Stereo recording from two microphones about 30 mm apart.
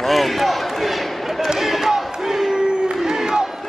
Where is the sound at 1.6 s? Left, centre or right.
Centre.